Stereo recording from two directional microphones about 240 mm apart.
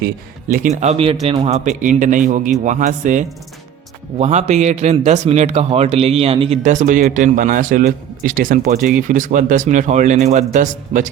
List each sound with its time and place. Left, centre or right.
0.0 s a man's voice: right